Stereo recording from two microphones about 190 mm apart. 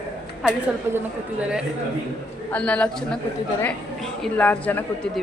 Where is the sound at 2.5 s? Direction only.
5° left (ahead or behind).